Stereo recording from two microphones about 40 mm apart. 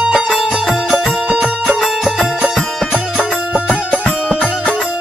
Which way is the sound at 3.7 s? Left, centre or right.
Left.